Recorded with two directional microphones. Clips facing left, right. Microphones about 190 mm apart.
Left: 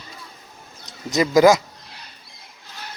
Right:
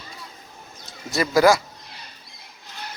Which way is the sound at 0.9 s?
20° left (ahead or behind).